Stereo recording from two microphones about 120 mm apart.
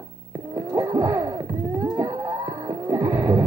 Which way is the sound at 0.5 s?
25° right (ahead or behind).